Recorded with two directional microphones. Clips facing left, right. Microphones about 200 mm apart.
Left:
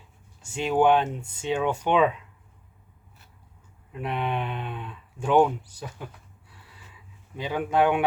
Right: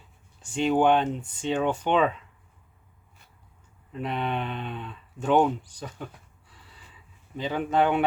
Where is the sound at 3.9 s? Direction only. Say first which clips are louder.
Even; 10° left (ahead or behind).